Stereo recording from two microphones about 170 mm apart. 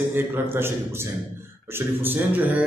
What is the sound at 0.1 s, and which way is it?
A man's voice, 15° right (ahead or behind).